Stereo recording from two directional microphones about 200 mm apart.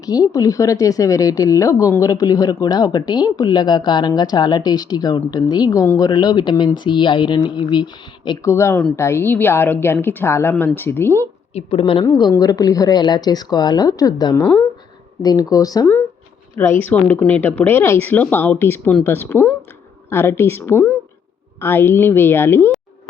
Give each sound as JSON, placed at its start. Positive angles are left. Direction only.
{"t": 0.0, "sound": "a woman's voice", "side_deg": 20}
{"t": 11.5, "sound": "a woman's voice", "side_deg": 30}